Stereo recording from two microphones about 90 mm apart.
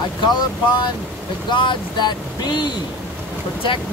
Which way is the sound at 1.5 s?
60° left (ahead or behind).